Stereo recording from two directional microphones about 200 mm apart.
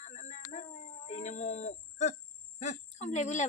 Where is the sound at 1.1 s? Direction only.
35° left (ahead or behind).